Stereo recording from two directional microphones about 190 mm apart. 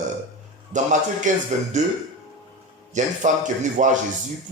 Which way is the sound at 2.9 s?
40° right (ahead or behind).